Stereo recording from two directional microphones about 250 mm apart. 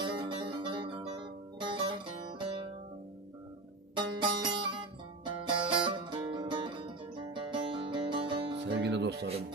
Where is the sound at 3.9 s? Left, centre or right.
Centre.